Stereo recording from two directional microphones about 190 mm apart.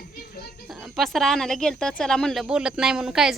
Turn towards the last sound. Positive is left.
turn(degrees=-5)  # may be behind; listen again after turning